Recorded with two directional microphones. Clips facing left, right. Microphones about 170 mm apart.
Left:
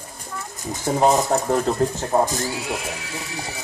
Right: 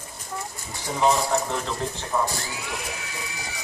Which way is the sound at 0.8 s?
45° left (ahead or behind).